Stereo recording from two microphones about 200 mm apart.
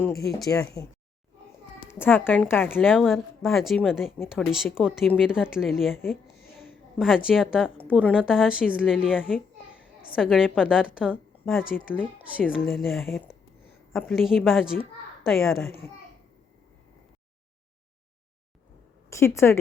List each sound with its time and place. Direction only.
0.3 s a woman's voice: centre (ahead or behind)
0.6 s a woman's voice: 15° left (ahead or behind)
2.0 s a woman's voice: 10° left (ahead or behind)
2.8 s a woman's voice: centre (ahead or behind)
19.1 s a woman's voice: 15° left (ahead or behind)